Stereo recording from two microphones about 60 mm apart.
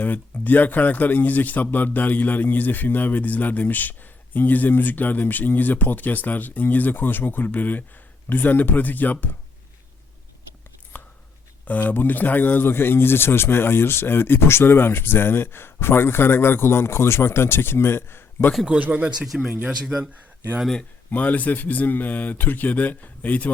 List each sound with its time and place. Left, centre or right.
0.0 s a man's voice: left
10.9 s a sound: left
11.6 s speech: left
18.6 s speech: right
19.3 s speech: centre
20.0 s speech: right
21.1 s a man's voice: left